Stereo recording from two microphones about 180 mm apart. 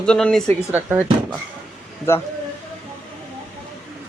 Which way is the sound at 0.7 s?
10° right (ahead or behind).